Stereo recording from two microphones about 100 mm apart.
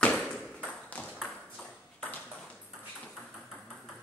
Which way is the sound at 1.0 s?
Centre (ahead or behind).